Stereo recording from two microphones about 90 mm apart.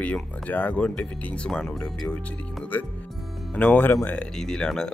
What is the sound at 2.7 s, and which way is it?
Speech, 20° left (ahead or behind).